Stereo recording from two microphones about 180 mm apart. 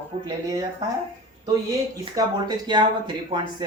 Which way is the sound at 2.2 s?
25° right (ahead or behind).